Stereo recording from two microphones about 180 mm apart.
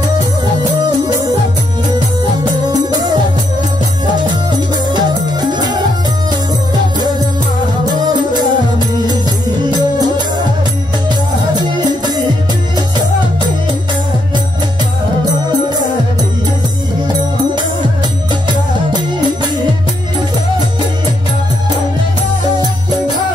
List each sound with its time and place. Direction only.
2.7 s music: 20° right (ahead or behind)
5.5 s music: 25° right (ahead or behind)
7.9 s music: 25° right (ahead or behind)